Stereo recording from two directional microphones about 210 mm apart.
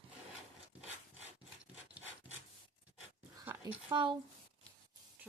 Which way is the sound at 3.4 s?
10° right (ahead or behind).